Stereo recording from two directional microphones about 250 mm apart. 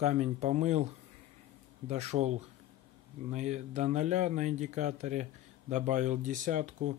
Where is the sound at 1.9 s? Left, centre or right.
Right.